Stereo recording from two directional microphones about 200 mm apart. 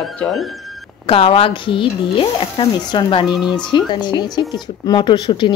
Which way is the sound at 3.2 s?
5° right (ahead or behind).